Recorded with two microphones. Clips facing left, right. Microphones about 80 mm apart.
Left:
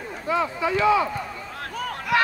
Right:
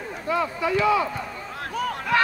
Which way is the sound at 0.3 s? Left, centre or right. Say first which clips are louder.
Left 1 dB; left.